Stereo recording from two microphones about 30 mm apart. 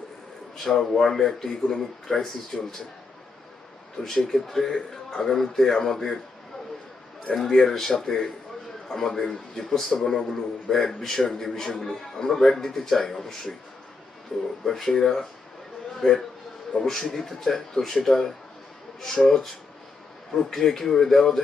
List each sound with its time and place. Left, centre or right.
0.5 s a man's voice: centre
3.9 s a man's voice: centre
7.5 s a man's voice: centre
14.6 s a man's voice: centre